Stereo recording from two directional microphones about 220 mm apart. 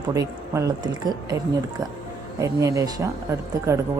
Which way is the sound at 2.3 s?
15° right (ahead or behind).